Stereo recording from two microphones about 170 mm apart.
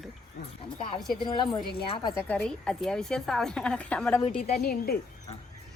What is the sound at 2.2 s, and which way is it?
A woman's voice, 5° left (ahead or behind).